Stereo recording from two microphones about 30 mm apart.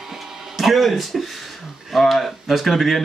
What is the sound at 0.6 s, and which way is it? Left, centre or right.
Speech, centre.